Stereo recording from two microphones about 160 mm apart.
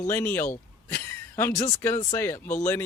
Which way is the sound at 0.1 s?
15° left (ahead or behind).